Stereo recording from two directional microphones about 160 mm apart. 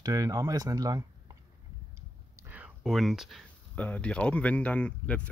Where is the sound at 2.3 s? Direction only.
10° right (ahead or behind).